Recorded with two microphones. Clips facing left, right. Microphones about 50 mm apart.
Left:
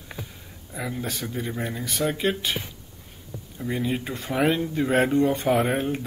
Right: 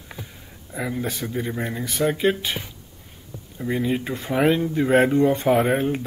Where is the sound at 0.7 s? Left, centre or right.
Centre.